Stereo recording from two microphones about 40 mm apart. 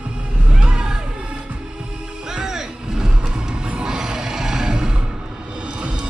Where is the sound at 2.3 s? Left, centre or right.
Centre.